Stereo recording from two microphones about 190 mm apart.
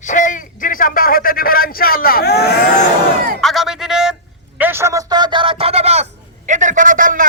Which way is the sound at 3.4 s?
Centre (ahead or behind).